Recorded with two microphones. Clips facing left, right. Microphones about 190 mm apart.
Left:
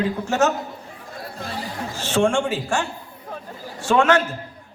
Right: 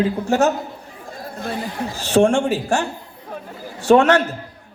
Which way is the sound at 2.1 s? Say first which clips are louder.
Right 5 dB; 40° right (ahead or behind).